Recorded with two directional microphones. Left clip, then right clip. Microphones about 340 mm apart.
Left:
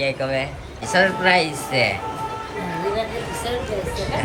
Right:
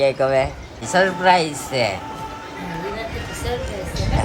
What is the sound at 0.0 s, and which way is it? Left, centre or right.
Speech, centre.